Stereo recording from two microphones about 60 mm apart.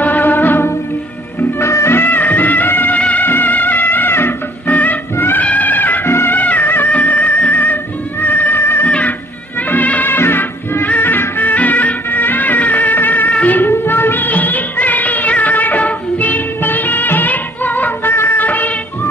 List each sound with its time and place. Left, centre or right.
0.0 s music: left
1.6 s music: left
2.0 s music: left
4.6 s music: left
5.1 s music: left
5.4 s music: left
6.0 s music: left
6.3 s music: left
9.6 s music: left
13.6 s music: left
18.1 s music: left
18.4 s music: left